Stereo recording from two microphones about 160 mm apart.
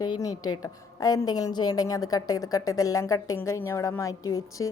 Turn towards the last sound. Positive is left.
turn(degrees=20)  # may be behind; listen again after turning